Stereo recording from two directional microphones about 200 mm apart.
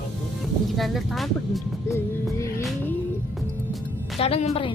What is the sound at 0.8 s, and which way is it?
Speech, centre (ahead or behind).